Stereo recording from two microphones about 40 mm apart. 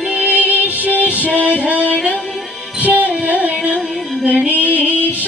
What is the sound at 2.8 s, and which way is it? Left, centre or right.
Music, right.